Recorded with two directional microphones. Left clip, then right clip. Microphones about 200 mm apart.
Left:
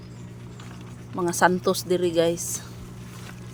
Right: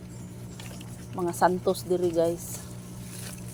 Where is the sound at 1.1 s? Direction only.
30° left (ahead or behind).